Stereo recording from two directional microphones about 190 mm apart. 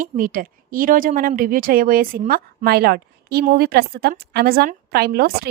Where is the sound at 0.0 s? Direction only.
45° right (ahead or behind).